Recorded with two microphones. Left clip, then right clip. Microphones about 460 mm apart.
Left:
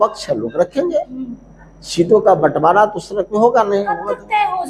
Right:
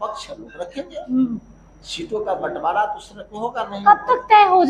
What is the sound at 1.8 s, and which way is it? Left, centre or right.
Speech, left.